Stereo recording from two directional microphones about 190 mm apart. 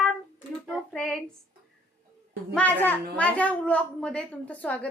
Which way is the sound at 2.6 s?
10° left (ahead or behind).